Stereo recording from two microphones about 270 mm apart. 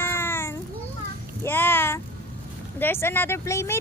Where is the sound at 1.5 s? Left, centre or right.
Centre.